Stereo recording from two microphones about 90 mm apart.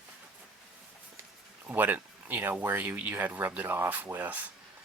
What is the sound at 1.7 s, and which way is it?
Speech, 20° right (ahead or behind).